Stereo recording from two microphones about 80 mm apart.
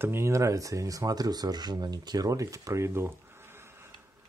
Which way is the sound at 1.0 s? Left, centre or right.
Right.